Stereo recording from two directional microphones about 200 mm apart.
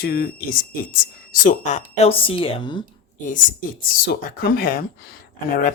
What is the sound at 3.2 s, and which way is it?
Speech, 40° left (ahead or behind).